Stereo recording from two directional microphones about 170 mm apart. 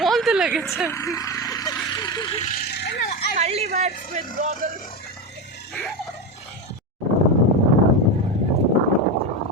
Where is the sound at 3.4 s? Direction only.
40° right (ahead or behind).